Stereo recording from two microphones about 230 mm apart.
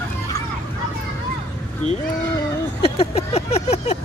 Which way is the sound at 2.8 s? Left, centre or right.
Left.